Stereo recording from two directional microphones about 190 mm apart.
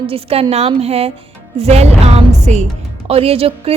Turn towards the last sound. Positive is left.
turn(degrees=-30)  # may be behind; listen again after turning